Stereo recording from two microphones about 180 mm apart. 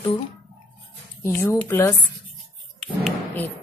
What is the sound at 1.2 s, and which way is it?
Speech, 15° left (ahead or behind).